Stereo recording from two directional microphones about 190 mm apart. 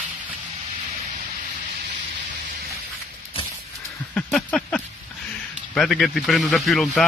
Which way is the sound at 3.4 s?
30° left (ahead or behind).